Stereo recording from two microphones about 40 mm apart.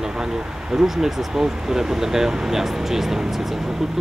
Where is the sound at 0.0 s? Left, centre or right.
Centre.